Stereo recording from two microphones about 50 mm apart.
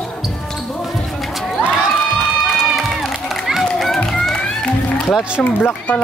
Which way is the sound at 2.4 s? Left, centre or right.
Centre.